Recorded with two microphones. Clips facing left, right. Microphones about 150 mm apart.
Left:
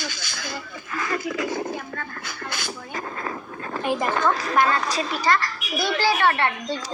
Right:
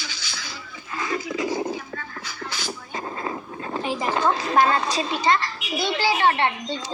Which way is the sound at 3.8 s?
50° left (ahead or behind).